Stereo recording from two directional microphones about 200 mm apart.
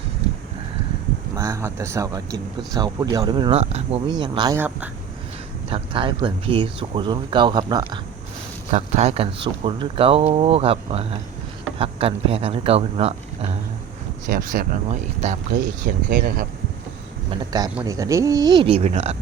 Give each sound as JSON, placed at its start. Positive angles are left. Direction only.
{"t": 1.4, "sound": "speech", "side_deg": -15}
{"t": 4.5, "sound": "speech", "side_deg": -10}
{"t": 5.6, "sound": "speech", "side_deg": -25}
{"t": 8.7, "sound": "speech", "side_deg": -35}
{"t": 14.3, "sound": "speech", "side_deg": -45}
{"t": 17.3, "sound": "speech", "side_deg": -20}